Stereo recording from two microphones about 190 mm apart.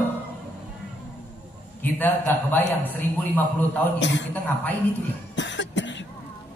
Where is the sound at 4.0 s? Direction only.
70° left (ahead or behind).